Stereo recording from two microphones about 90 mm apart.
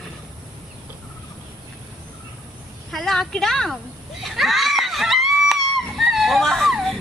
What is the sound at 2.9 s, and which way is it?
Speech, 5° left (ahead or behind).